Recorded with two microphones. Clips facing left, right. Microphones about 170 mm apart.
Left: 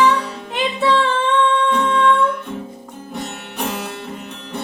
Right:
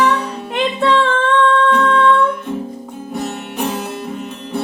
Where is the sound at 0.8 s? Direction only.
10° left (ahead or behind).